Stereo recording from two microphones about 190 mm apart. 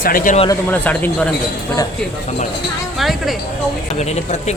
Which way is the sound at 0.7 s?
10° left (ahead or behind).